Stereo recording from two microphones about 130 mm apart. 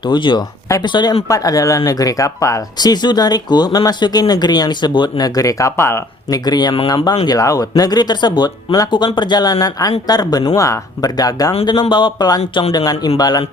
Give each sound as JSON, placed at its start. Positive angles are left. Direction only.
{"t": 0.0, "sound": "speech", "side_deg": 35}
{"t": 6.4, "sound": "speech", "side_deg": 30}